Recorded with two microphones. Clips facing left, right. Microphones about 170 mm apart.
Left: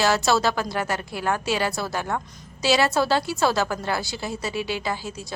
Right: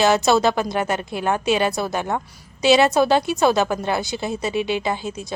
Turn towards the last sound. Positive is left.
turn(degrees=-20)  # may be behind; listen again after turning